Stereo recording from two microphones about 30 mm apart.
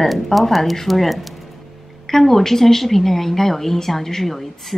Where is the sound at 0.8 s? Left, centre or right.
Centre.